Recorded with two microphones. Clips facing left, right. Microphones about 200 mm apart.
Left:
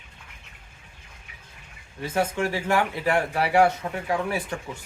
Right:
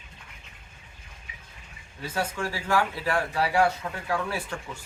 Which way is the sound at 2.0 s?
20° left (ahead or behind).